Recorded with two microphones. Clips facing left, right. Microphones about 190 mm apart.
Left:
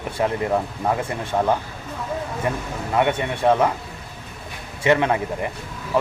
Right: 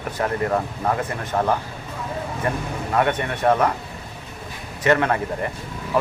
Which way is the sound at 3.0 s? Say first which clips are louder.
Left 1 dB; 15° left (ahead or behind).